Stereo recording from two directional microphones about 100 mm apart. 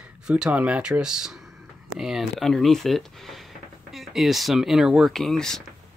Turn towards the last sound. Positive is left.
turn(degrees=5)  # may be behind; listen again after turning